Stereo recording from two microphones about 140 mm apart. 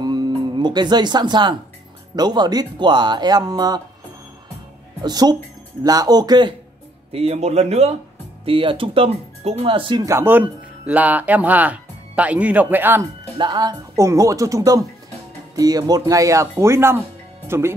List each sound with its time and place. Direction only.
0.0 s music: 30° right (ahead or behind)
2.1 s speech: 30° right (ahead or behind)
5.0 s speech: 30° right (ahead or behind)
7.1 s a man's voice: 45° right (ahead or behind)
8.5 s speech: 40° right (ahead or behind)
10.0 s speech: 15° right (ahead or behind)
13.4 s speech: 30° right (ahead or behind)